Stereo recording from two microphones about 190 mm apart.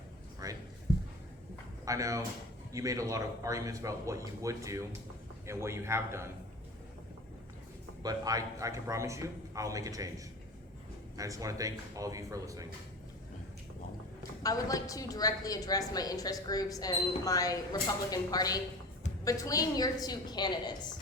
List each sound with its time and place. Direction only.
0.4 s a sound: 15° right (ahead or behind)
1.8 s speech: 15° right (ahead or behind)
8.0 s speech: 20° right (ahead or behind)
11.2 s speech: 15° right (ahead or behind)
14.4 s a woman's voice: 20° left (ahead or behind)